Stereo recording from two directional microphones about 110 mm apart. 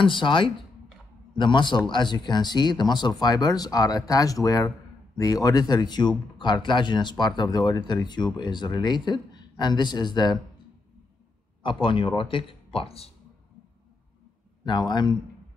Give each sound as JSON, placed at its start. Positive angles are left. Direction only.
{"t": 0.0, "sound": "speech", "side_deg": 50}
{"t": 11.6, "sound": "speech", "side_deg": 50}
{"t": 14.6, "sound": "speech", "side_deg": 45}